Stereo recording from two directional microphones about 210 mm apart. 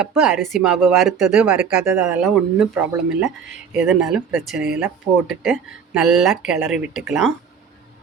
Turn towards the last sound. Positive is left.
turn(degrees=0)  # may be behind; listen again after turning